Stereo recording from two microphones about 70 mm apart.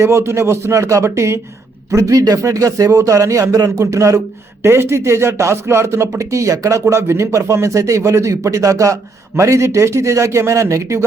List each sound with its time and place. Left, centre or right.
0.0 s speech: right
1.9 s speech: right